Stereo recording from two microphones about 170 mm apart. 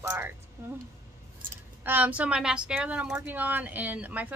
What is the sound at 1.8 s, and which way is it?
A woman's voice, 10° right (ahead or behind).